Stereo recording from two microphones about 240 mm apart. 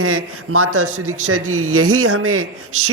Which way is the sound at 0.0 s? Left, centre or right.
Right.